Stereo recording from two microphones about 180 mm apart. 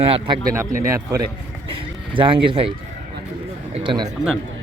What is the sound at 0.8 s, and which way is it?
Speech, 20° right (ahead or behind).